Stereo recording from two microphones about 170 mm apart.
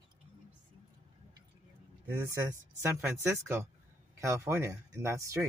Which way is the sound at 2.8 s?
15° right (ahead or behind).